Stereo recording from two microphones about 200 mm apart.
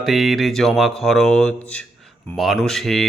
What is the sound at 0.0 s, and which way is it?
Speech, centre (ahead or behind).